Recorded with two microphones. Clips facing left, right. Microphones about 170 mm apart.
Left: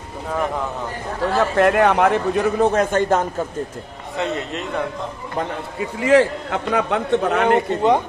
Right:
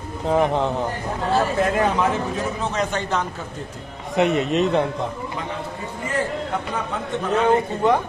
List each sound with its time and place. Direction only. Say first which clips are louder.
0.3 s a man's voice: right 4 dB; 25° right (ahead or behind)
1.6 s a man's voice: left 5 dB; 70° left (ahead or behind); by 3.3 s 50° left (ahead or behind)
4.2 s a man's voice: right 6 dB; 20° right (ahead or behind)
5.8 s a man's voice: left 13 dB; 90° left; by 7.8 s 70° left (ahead or behind)